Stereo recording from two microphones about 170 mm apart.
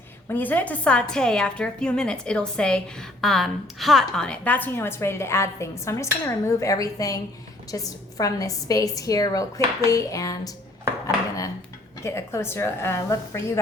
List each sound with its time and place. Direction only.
0.3 s a woman's voice: 10° left (ahead or behind)
11.0 s dishes: 20° left (ahead or behind)
12.0 s a woman's voice: 15° left (ahead or behind)